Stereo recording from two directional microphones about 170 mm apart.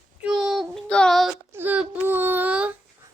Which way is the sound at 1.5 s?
10° right (ahead or behind).